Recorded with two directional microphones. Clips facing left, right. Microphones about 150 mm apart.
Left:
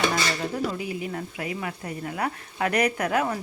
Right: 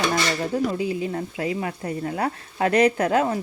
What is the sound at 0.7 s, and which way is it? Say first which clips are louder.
Speech: right 5 dB; 25° right (ahead or behind).